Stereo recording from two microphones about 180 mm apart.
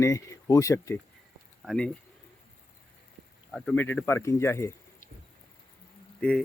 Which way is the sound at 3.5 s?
Centre (ahead or behind).